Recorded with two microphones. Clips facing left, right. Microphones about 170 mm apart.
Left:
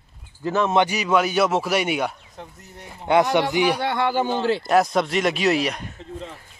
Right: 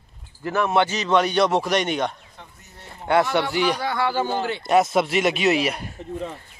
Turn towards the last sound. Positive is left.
turn(degrees=-10)  # may be behind; listen again after turning